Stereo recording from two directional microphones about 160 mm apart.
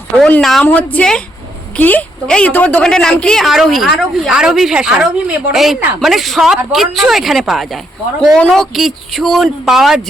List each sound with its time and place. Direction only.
0.2 s a woman's voice: 5° left (ahead or behind)